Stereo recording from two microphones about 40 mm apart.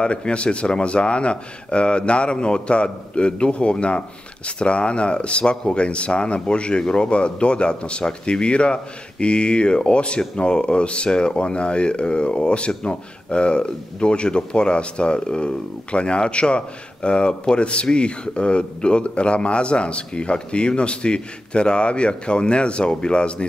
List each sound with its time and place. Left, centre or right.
0.0 s speech: left